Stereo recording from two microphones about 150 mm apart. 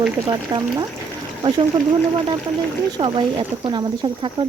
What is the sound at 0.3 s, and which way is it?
Speech, 25° right (ahead or behind).